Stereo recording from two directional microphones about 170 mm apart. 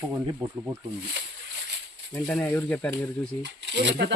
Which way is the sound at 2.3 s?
10° left (ahead or behind).